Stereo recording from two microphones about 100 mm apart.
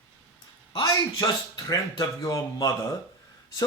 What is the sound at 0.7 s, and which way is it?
Speech, 45° left (ahead or behind).